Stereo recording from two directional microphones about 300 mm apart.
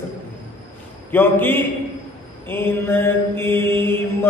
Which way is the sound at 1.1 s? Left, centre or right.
Centre.